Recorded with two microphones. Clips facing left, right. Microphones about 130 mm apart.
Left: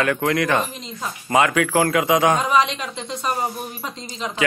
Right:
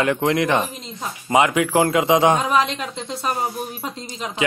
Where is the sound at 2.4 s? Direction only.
Centre (ahead or behind).